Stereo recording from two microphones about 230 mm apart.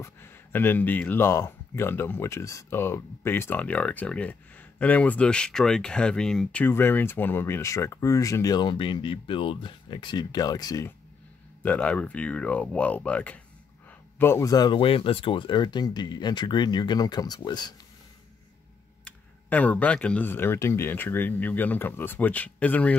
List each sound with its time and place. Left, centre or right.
0.0 s speech: centre
19.0 s speech: centre